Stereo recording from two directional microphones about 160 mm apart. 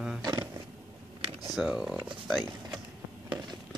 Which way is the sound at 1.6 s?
5° right (ahead or behind).